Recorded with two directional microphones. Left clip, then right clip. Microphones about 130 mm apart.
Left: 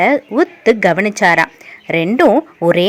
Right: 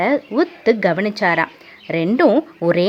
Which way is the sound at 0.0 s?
25° left (ahead or behind).